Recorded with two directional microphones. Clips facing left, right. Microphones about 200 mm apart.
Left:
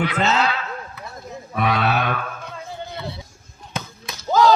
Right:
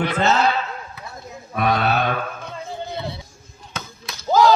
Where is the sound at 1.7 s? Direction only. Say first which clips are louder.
Right 2 dB; 40° right (ahead or behind).